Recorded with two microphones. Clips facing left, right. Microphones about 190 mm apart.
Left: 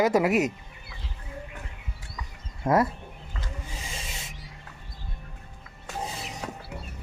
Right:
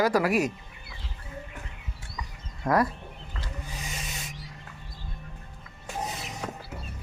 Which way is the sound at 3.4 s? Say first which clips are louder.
Even; 25° left (ahead or behind).